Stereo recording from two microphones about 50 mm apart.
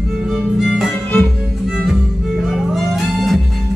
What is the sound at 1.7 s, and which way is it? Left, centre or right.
Music, centre.